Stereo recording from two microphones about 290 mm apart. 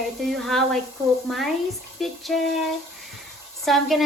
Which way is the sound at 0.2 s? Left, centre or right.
Centre.